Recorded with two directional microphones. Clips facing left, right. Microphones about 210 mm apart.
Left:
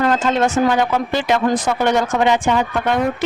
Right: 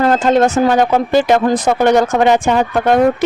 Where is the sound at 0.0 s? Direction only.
40° right (ahead or behind).